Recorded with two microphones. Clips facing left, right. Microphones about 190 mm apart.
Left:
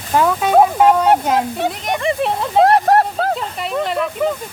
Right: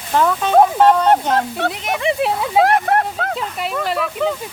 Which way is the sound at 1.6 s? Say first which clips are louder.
Left 1 dB; centre (ahead or behind).